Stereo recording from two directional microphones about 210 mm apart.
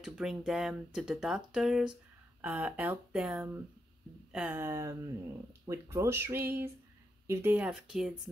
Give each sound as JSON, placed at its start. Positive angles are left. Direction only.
{"t": 0.0, "sound": "speech", "side_deg": 0}